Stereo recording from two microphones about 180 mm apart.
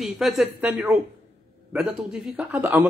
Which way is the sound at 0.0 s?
Centre (ahead or behind).